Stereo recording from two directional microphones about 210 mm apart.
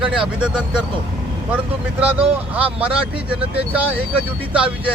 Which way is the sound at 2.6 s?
5° right (ahead or behind).